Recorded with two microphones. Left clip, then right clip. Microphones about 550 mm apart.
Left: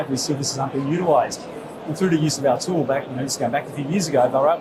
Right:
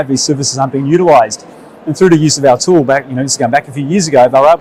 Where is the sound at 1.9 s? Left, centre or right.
Right.